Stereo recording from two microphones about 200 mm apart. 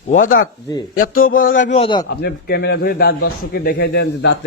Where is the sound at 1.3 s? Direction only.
45° left (ahead or behind).